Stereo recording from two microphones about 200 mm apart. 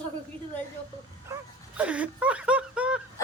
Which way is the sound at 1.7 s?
5° right (ahead or behind).